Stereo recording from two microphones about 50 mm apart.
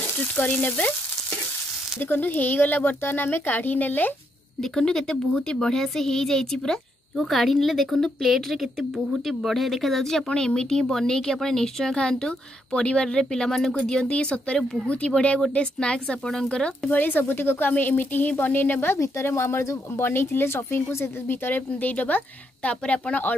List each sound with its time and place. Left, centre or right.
0.2 s frying: left
2.0 s a woman's voice: left
3.0 s a woman's voice: left
4.6 s speech: centre
14.1 s frying: left
16.3 s speech: centre
16.9 s a woman's voice: left
19.2 s speech: left
20.0 s speech: left